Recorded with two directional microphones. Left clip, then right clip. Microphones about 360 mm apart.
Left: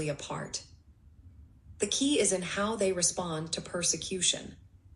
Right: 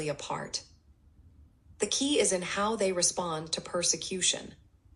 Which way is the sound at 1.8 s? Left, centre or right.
Centre.